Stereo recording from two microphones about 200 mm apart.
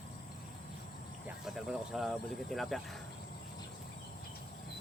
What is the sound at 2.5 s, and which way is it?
Speech, centre (ahead or behind).